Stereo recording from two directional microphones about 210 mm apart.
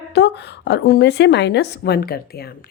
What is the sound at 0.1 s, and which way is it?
A woman's voice, 55° left (ahead or behind).